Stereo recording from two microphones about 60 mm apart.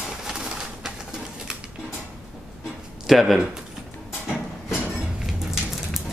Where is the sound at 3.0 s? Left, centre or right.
Centre.